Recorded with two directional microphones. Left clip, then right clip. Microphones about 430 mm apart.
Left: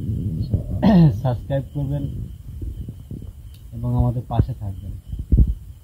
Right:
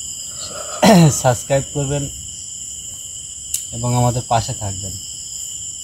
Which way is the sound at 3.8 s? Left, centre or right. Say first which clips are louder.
Right 8 dB; centre.